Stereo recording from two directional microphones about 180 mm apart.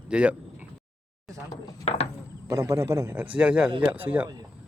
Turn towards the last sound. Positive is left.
turn(degrees=-10)  # may be behind; listen again after turning